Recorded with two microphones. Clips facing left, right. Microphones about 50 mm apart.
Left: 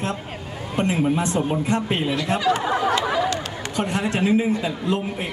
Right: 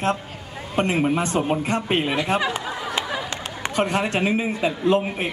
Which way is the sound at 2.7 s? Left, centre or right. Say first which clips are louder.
Left 8 dB; left.